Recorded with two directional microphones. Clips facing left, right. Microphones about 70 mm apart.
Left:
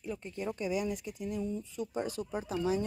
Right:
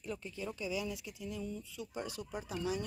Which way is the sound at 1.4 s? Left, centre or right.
Left.